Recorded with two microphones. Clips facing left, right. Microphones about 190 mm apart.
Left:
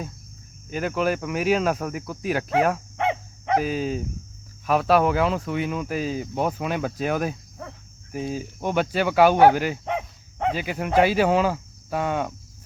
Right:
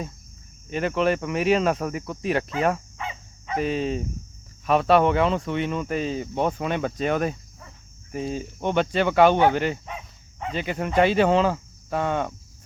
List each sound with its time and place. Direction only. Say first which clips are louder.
0.7 s speech: right 1 dB; centre (ahead or behind)
3.0 s dog: left 10 dB; 70° left (ahead or behind)
3.6 s speech: right 1 dB; centre (ahead or behind)
9.8 s dog: left 10 dB; 70° left (ahead or behind)
10.5 s speech: even; 5° left (ahead or behind)